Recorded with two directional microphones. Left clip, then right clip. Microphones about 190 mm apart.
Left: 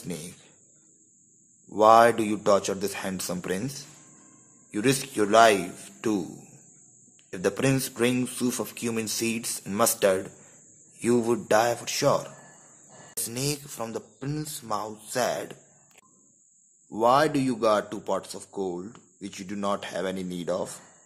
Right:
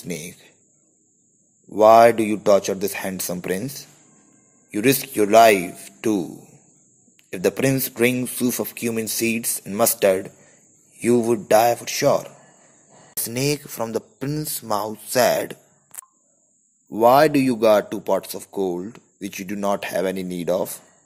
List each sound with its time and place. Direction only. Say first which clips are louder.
0.1 s speech: right 7 dB; 25° right (ahead or behind)
1.7 s speech: right 5 dB; 20° right (ahead or behind)
7.2 s a man's voice: right 5 dB; 20° right (ahead or behind)
13.1 s speech: right 8 dB; 35° right (ahead or behind)
16.9 s speech: right 7 dB; 25° right (ahead or behind)